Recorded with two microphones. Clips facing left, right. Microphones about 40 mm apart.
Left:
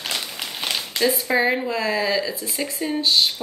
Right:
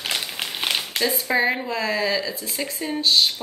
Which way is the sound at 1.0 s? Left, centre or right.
Centre.